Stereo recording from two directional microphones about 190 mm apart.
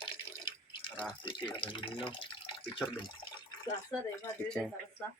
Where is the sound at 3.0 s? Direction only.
25° left (ahead or behind).